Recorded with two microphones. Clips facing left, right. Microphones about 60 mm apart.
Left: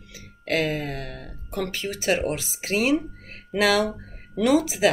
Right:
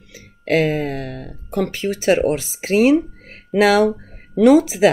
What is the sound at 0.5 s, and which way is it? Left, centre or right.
Speech, right.